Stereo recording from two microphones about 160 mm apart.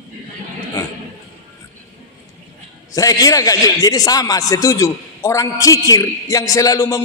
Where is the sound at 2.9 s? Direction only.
20° left (ahead or behind).